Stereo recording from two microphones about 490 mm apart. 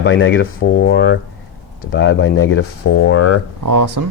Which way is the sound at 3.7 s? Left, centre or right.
Right.